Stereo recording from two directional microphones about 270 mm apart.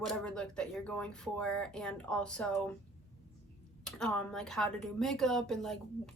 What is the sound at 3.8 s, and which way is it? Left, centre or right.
A woman's voice, centre.